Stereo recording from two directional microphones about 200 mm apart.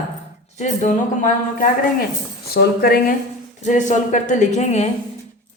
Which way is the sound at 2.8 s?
50° left (ahead or behind).